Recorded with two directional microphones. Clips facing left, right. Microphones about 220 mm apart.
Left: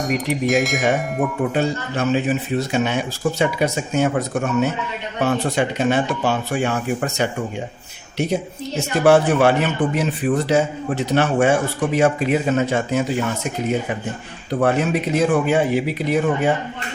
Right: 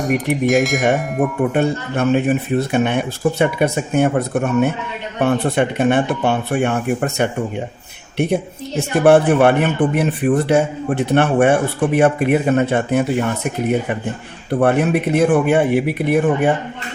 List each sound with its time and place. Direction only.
0.4 s speech: centre (ahead or behind)
1.5 s a man's voice: 55° right (ahead or behind)